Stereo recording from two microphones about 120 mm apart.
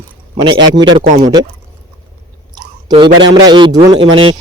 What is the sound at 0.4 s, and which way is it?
Speech, 40° right (ahead or behind).